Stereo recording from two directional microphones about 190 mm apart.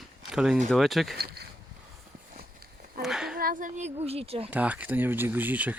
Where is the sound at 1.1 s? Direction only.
55° right (ahead or behind).